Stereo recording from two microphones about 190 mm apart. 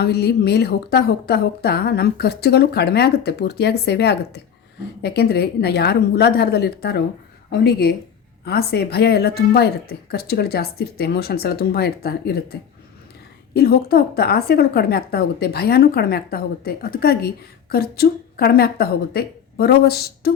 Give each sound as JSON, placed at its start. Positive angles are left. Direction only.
{"t": 0.0, "sound": "a woman's voice", "side_deg": 55}